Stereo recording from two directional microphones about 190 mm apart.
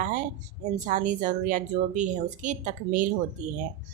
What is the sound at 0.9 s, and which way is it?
Speech, 40° right (ahead or behind).